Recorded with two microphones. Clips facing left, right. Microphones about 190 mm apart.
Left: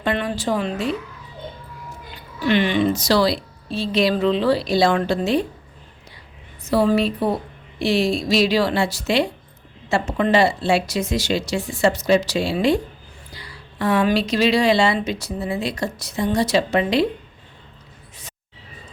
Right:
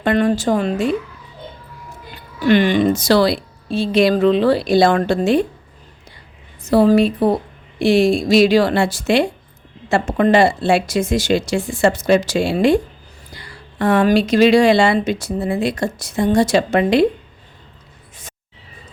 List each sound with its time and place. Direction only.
0.0 s a woman's voice: 45° right (ahead or behind)
2.5 s a woman's voice: 45° right (ahead or behind)
6.6 s a woman's voice: 45° right (ahead or behind)